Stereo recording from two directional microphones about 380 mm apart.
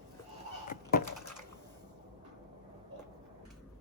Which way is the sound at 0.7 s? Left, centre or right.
Left.